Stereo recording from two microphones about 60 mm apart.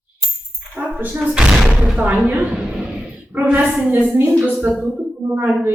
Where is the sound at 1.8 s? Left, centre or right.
Right.